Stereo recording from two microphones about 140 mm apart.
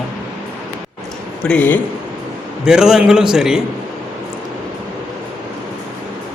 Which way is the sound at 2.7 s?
5° right (ahead or behind).